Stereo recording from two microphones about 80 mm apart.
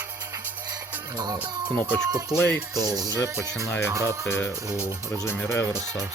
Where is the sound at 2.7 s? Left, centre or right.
Right.